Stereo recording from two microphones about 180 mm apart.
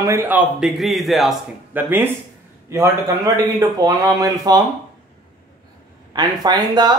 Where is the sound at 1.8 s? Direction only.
10° right (ahead or behind).